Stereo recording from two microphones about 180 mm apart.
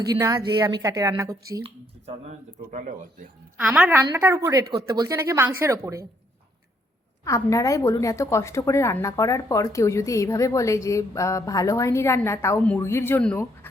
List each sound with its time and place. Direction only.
0.1 s a woman's voice: 20° right (ahead or behind)
2.6 s speech: 50° right (ahead or behind)
3.6 s a woman's voice: 5° right (ahead or behind)
4.6 s speech: 60° right (ahead or behind)
4.9 s speech: 20° right (ahead or behind)
7.3 s a woman's voice: 20° left (ahead or behind)